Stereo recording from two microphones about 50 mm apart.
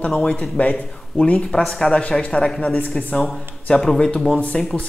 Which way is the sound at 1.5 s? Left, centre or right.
Centre.